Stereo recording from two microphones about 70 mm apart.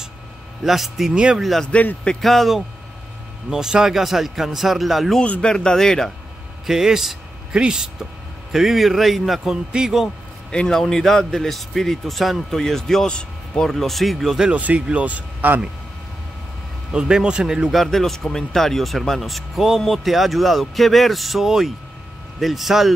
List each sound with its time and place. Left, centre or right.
0.7 s speech: centre
1.1 s a man's voice: centre
1.4 s speech: centre
1.7 s a man's voice: left
2.2 s speech: centre
5.2 s a man's voice: centre
6.6 s speech: centre
10.5 s speech: centre
14.5 s speech: centre
16.9 s a man's voice: centre
17.7 s speech: centre